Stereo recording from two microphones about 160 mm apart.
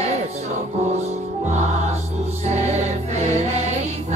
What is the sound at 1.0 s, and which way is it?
Music, 45° right (ahead or behind).